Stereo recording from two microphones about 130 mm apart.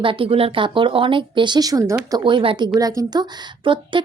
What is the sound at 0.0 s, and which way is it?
A woman's voice, 40° right (ahead or behind).